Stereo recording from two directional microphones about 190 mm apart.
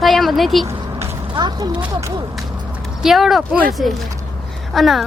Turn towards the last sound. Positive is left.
turn(degrees=0)  # may be behind; listen again after turning